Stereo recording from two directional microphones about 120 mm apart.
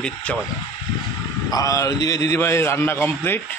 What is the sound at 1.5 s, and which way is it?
A man's voice, 30° left (ahead or behind).